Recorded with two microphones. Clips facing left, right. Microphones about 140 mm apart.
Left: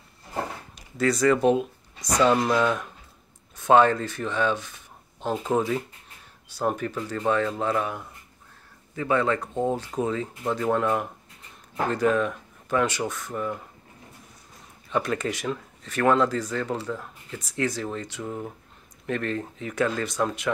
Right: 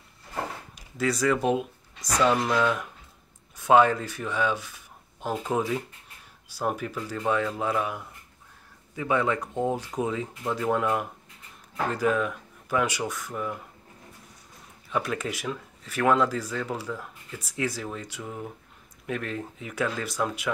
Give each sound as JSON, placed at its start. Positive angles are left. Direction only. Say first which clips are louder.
{"t": 0.7, "sound": "speech", "louder": "left 3 dB", "side_deg": -10}
{"t": 2.4, "sound": "speech", "louder": "left 2 dB", "side_deg": 10}
{"t": 3.5, "sound": "speech", "louder": "left 1 dB", "side_deg": -10}
{"t": 14.9, "sound": "speech", "louder": "left 3 dB", "side_deg": -5}